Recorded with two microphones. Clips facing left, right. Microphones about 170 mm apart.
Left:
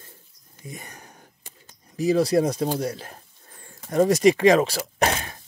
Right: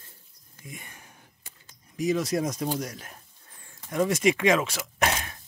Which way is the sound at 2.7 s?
30° left (ahead or behind).